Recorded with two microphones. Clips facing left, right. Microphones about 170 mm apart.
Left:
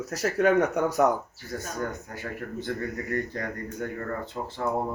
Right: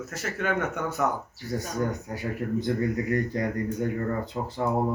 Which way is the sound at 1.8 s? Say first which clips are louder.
Right 5 dB; 15° right (ahead or behind).